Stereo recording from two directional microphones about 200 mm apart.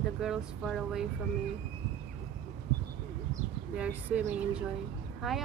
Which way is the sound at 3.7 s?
5° right (ahead or behind).